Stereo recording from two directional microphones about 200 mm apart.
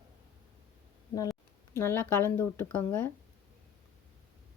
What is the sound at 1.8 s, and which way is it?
Speech, 10° left (ahead or behind).